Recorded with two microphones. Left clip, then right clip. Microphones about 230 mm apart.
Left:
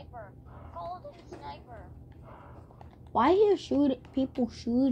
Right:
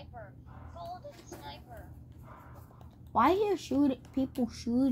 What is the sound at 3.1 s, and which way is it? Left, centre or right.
A woman's voice, right.